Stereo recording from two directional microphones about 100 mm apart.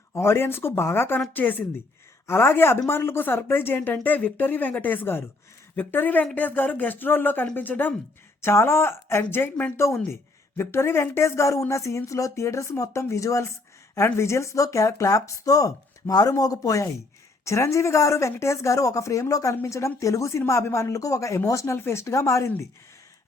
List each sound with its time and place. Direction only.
0.1 s speech: 25° left (ahead or behind)